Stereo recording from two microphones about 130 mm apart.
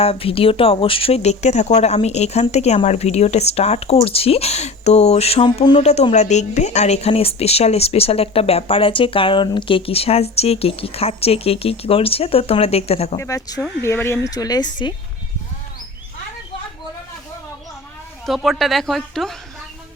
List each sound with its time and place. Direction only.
0.0 s a woman's voice: 45° left (ahead or behind)
13.1 s speech: 25° left (ahead or behind)
18.3 s a woman's voice: centre (ahead or behind)